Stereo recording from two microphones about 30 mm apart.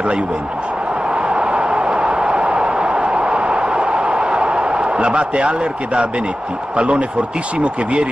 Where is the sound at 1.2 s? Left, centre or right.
Right.